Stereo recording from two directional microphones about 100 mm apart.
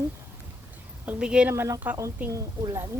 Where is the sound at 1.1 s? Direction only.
10° right (ahead or behind).